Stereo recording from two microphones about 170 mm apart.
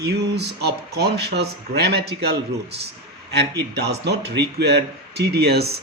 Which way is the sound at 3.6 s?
80° right.